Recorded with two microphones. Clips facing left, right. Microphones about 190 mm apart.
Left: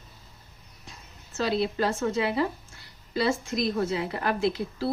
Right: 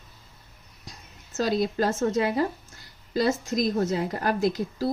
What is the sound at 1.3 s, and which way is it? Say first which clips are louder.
A woman's voice: right 2 dB; 40° right (ahead or behind).